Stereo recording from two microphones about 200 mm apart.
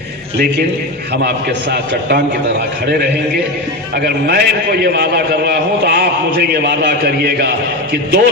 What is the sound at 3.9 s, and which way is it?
A man's voice, 50° right (ahead or behind).